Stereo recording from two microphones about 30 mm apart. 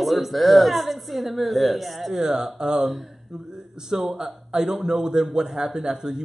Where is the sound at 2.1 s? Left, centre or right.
Centre.